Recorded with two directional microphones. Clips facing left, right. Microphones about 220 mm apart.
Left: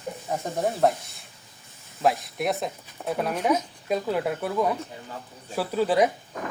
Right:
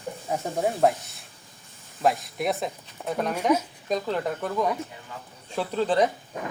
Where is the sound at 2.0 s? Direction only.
Centre (ahead or behind).